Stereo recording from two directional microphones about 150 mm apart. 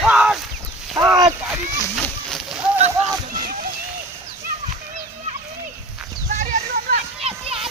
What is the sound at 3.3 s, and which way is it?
Splash, 65° right (ahead or behind).